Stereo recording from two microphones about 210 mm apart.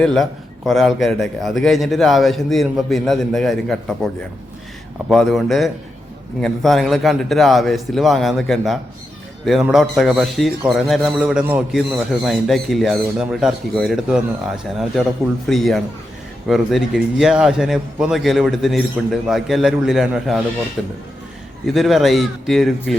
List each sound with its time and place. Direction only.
0.0 s a man's voice: centre (ahead or behind)